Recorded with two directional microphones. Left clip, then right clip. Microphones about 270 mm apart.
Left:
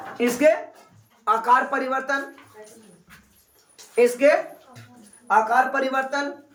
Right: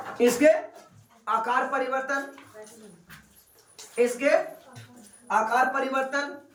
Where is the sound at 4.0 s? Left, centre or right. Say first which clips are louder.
Left 5 dB; left.